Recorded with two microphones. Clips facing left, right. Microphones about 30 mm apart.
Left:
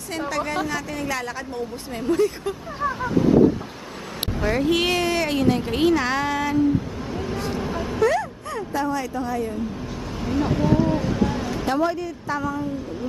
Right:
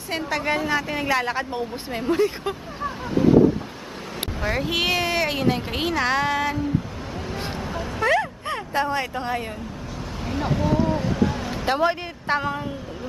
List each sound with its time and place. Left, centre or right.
0.7 s speech: right
2.8 s a sound: centre
4.4 s a woman's voice: centre
7.5 s vehicle: centre
8.0 s vehicle: right
10.2 s vehicle: centre
11.6 s a woman's voice: right